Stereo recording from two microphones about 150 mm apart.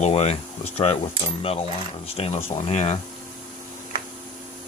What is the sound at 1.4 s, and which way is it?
Speech, 40° left (ahead or behind).